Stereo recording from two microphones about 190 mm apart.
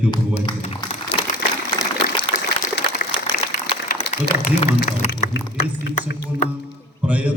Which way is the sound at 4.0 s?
35° left (ahead or behind).